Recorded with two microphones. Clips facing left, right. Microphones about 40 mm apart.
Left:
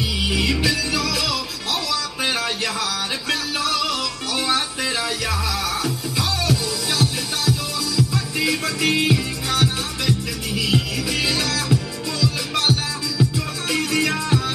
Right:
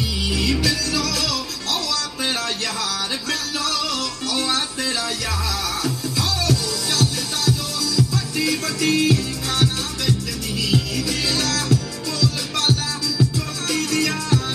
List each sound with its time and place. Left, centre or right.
0.2 s music: centre
3.3 s music: centre
6.1 s music: centre
8.8 s music: left
9.5 s music: centre